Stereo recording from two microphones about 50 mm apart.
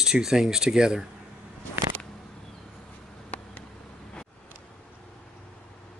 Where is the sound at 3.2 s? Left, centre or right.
Left.